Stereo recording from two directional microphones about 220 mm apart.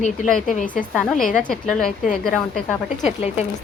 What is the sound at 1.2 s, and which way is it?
Speech, 40° left (ahead or behind).